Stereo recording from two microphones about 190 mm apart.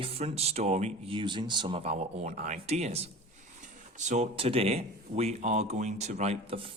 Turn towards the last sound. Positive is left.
turn(degrees=-30)  # may be behind; listen again after turning